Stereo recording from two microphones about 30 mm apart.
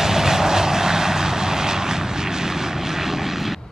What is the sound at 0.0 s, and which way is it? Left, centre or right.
Vehicle, centre.